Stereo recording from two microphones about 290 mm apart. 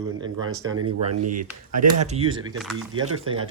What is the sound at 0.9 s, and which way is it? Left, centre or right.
Speech, right.